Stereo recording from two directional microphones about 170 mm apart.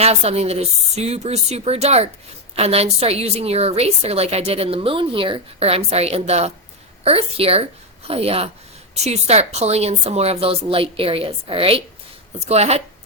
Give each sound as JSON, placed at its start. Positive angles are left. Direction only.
{"t": 0.0, "sound": "a woman's voice", "side_deg": -35}